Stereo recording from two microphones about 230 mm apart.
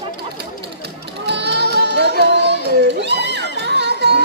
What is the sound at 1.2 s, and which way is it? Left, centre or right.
Music, right.